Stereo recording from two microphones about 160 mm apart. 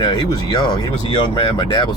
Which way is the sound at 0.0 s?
30° left (ahead or behind).